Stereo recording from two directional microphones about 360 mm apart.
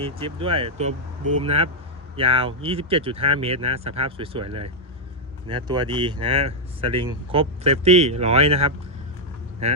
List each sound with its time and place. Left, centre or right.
0.0 s speech: centre
1.2 s speech: right
1.5 s speech: centre